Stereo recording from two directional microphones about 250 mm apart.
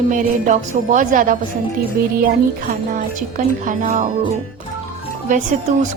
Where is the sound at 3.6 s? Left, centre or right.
Right.